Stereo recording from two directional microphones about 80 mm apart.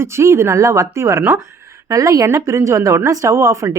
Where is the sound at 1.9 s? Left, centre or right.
Right.